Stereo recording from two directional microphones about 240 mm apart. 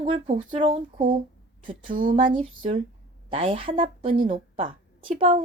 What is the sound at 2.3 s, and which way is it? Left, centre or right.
A woman's voice, right.